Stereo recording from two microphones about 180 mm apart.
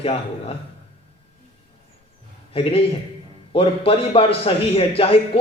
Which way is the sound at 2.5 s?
30° left (ahead or behind).